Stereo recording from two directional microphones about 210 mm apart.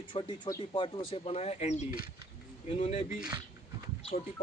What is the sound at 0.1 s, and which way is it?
Speech, 20° left (ahead or behind).